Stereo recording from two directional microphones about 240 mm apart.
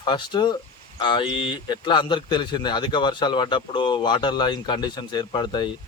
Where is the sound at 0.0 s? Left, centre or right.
Centre.